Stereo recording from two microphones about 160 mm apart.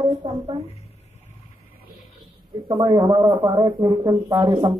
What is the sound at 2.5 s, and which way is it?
Speech, 25° right (ahead or behind).